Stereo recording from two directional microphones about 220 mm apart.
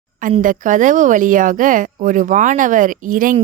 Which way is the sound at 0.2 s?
35° right (ahead or behind).